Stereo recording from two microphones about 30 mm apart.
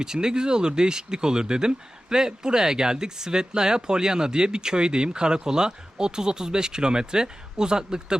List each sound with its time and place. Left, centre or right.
0.0 s speech: right